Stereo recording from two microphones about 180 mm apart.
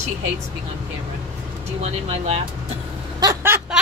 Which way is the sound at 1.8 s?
35° right (ahead or behind).